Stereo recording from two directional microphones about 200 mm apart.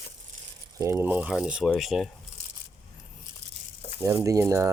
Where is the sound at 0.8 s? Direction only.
15° right (ahead or behind).